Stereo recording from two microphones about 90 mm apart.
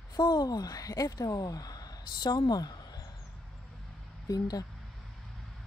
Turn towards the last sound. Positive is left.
turn(degrees=45)  # may be behind; listen again after turning